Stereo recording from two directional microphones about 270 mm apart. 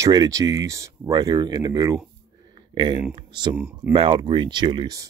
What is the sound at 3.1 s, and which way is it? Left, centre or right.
Speech, centre.